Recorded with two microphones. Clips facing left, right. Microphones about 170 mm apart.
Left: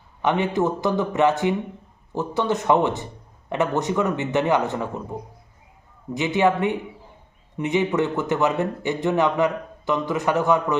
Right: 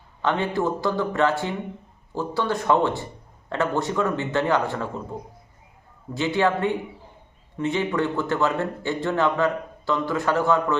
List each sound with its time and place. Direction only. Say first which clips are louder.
0.2 s speech: left 2 dB; 20° left (ahead or behind)
6.1 s speech: left 2 dB; 20° left (ahead or behind)